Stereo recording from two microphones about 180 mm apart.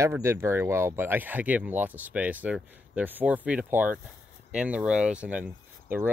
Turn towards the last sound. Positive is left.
turn(degrees=-10)  # may be behind; listen again after turning